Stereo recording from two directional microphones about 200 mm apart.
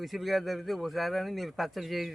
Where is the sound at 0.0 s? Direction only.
Centre (ahead or behind).